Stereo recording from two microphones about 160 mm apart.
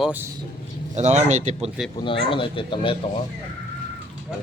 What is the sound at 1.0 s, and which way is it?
Speech, 45° right (ahead or behind).